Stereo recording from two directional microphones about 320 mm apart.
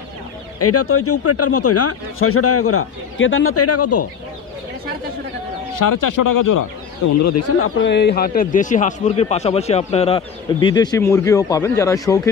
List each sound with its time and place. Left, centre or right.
0.6 s speech: left
5.8 s speech: left
7.2 s a man's voice: left; by 12.2 s centre